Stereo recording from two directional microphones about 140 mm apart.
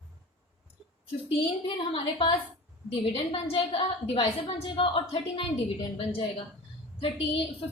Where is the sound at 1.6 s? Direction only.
40° left (ahead or behind).